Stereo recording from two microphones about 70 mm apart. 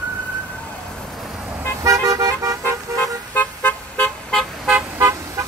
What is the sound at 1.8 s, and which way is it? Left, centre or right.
Vehicle, right.